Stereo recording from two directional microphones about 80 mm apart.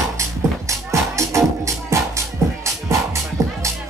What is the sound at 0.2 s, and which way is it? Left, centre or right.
Music, right.